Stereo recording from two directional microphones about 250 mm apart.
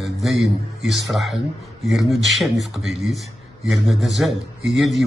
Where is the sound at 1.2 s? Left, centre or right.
Centre.